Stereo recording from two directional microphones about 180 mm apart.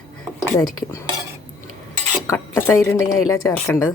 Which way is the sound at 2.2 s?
15° left (ahead or behind).